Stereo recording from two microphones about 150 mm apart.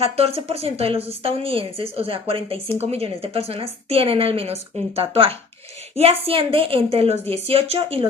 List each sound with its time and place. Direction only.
0.0 s a woman's voice: 40° right (ahead or behind)